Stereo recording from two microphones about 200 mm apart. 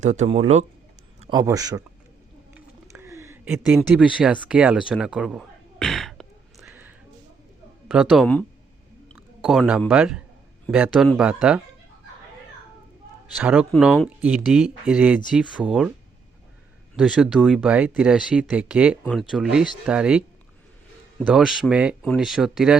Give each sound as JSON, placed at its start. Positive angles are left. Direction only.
{"t": 0.0, "sound": "speech", "side_deg": -35}
{"t": 1.3, "sound": "a man's voice", "side_deg": -15}
{"t": 2.6, "sound": "a sound", "side_deg": -15}
{"t": 6.7, "sound": "a sound", "side_deg": -10}
{"t": 7.9, "sound": "speech", "side_deg": 0}
{"t": 13.4, "sound": "speech", "side_deg": -5}
{"t": 17.0, "sound": "speech", "side_deg": -5}
{"t": 21.2, "sound": "speech", "side_deg": 0}